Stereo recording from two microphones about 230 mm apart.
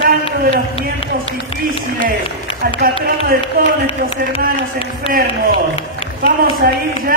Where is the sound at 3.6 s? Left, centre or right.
Right.